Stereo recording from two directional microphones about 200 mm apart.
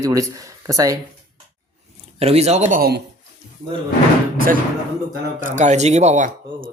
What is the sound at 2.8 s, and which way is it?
Speech, 55° right (ahead or behind).